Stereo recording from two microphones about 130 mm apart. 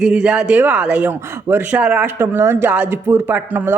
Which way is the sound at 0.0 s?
5° right (ahead or behind).